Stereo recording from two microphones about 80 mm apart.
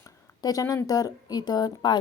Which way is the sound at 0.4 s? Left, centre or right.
Left.